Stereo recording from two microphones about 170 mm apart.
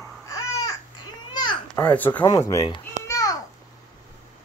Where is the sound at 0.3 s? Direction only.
20° left (ahead or behind).